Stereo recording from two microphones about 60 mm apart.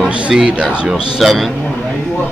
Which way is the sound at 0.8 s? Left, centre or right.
Centre.